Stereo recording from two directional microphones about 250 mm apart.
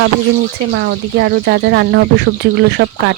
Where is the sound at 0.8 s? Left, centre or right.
Right.